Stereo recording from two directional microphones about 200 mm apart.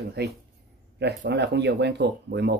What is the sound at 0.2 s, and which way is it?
Speech, 55° right (ahead or behind).